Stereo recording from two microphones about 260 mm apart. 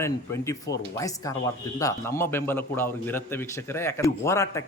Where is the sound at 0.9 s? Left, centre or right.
Centre.